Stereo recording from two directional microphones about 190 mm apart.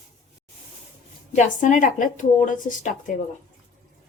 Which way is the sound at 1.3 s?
40° left (ahead or behind).